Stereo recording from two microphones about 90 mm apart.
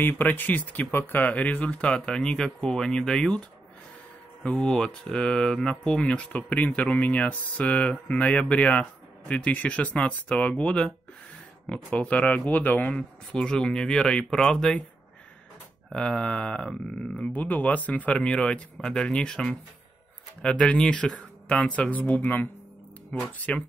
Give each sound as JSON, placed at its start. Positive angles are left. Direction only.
{"t": 0.0, "sound": "speech", "side_deg": 20}
{"t": 15.9, "sound": "speech", "side_deg": 10}